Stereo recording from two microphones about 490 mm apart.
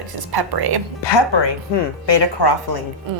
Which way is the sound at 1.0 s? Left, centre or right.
Left.